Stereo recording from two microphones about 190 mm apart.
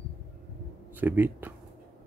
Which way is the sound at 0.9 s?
10° right (ahead or behind).